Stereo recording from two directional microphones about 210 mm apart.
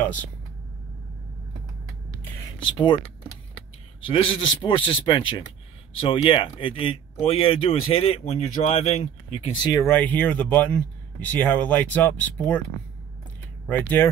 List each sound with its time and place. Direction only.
0.0 s speech: 5° left (ahead or behind)
2.4 s speech: 20° left (ahead or behind)
4.0 s speech: 25° left (ahead or behind)
9.7 s speech: 15° left (ahead or behind)
13.7 s speech: 10° left (ahead or behind)